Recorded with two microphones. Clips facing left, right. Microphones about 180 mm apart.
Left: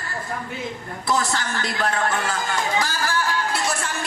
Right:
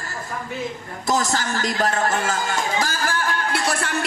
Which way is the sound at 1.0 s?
45° right (ahead or behind).